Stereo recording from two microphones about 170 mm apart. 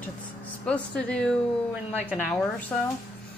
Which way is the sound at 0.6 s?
5° left (ahead or behind).